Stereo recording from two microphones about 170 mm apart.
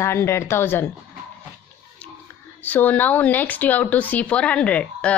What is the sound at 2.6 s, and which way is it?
Speech, 10° left (ahead or behind).